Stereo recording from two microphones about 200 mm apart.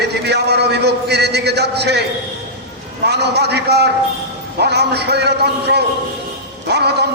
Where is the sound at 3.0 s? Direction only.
55° right (ahead or behind).